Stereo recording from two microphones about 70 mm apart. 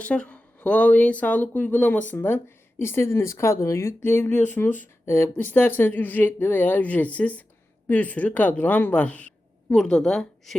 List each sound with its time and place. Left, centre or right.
0.0 s speech: centre; by 4.3 s left
4.3 s speech: left
5.4 s a woman's voice: left
9.7 s a woman's voice: centre